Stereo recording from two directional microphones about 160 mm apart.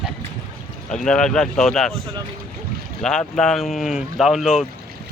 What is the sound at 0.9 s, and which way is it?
Speech, 5° left (ahead or behind).